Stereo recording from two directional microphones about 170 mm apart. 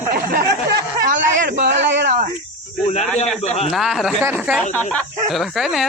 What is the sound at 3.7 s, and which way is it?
Speech, centre (ahead or behind).